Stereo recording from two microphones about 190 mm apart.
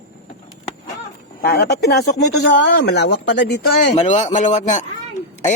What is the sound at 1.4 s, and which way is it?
Speech, 55° left (ahead or behind).